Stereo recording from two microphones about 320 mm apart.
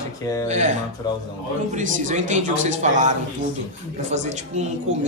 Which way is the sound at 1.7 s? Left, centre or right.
Right.